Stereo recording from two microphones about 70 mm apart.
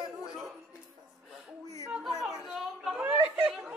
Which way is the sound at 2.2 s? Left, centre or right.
Centre.